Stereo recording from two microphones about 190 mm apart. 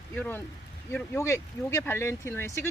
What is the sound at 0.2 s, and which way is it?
Speech, 10° left (ahead or behind).